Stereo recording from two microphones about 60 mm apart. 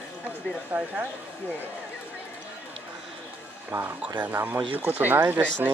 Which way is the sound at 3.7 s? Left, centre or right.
Right.